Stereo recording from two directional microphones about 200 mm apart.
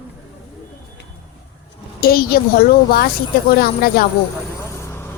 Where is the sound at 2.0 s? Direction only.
50° left (ahead or behind).